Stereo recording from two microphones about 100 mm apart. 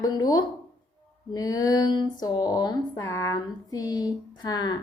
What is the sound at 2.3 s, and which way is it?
A woman's voice, 40° left (ahead or behind).